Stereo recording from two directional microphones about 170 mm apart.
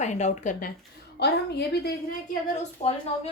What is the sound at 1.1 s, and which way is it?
Speech, 75° left (ahead or behind).